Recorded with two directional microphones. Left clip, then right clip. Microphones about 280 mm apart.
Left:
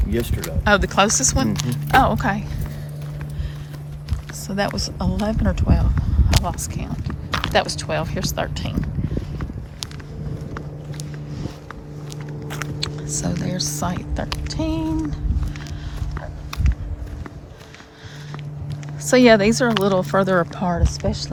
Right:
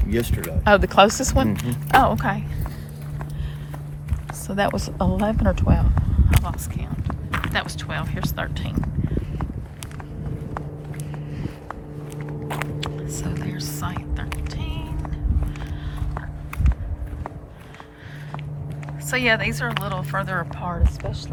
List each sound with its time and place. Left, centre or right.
0.0 s speech: centre
4.4 s speech: centre
12.8 s speech: centre
19.0 s speech: centre